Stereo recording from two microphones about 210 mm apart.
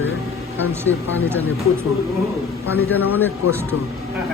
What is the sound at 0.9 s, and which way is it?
Speech, 70° left (ahead or behind).